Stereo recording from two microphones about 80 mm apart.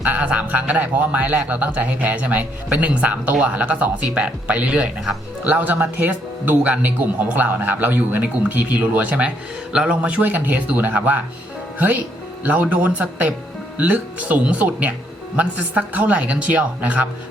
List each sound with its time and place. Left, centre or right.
0.0 s speech: centre